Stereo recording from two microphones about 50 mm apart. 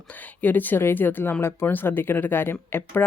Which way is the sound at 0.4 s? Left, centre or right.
Left.